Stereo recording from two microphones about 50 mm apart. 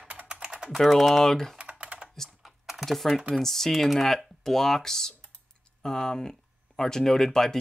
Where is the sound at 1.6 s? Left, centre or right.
Right.